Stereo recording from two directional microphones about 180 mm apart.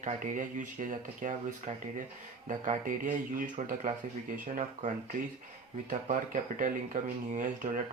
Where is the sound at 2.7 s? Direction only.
45° right (ahead or behind).